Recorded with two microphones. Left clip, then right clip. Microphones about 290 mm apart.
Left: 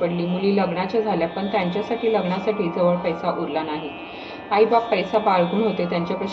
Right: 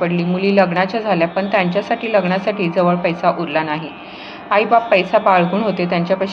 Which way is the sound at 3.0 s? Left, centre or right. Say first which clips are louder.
Right 7 dB; right.